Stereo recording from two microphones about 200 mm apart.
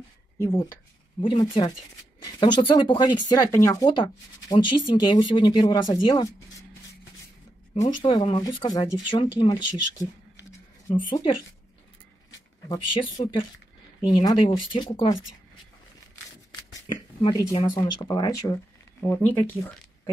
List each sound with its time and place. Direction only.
0.4 s speech: 15° left (ahead or behind)
8.0 s speech: 25° left (ahead or behind)
11.1 s speech: 25° left (ahead or behind)
12.6 s speech: 25° left (ahead or behind)
16.8 s speech: 20° left (ahead or behind)